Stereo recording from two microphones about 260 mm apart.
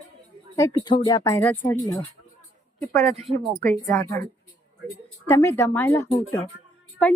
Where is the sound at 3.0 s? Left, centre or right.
Right.